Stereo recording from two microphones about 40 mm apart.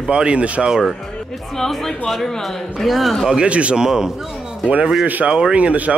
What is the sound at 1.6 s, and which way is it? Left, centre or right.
Speech, centre.